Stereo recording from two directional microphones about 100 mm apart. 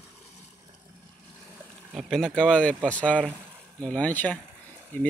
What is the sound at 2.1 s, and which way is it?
Speech, 5° left (ahead or behind).